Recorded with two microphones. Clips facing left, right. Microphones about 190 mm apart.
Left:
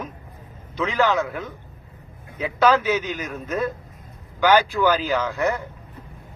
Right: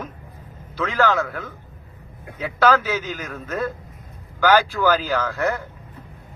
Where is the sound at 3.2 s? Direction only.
10° left (ahead or behind).